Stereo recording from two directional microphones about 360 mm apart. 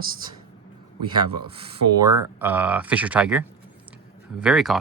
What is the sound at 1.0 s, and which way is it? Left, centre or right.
Speech, centre.